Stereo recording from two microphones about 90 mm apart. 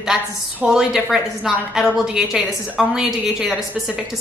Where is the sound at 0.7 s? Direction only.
5° right (ahead or behind).